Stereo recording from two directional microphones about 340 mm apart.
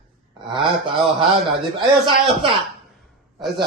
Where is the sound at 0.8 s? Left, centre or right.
Centre.